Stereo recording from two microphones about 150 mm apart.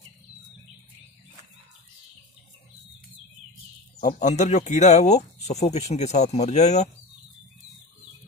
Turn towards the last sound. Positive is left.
turn(degrees=50)  # may be behind; listen again after turning